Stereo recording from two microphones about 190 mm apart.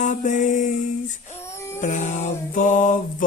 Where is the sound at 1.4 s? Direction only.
15° left (ahead or behind).